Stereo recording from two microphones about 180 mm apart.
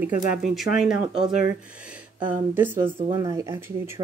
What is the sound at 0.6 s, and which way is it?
Speech, 5° right (ahead or behind).